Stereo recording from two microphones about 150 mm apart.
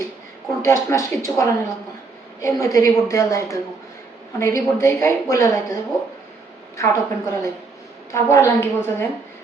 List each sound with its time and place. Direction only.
0.6 s a woman's voice: 20° left (ahead or behind)
6.7 s a woman's voice: 20° left (ahead or behind)